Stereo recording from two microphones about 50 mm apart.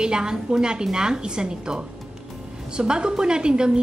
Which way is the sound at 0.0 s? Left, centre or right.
Centre.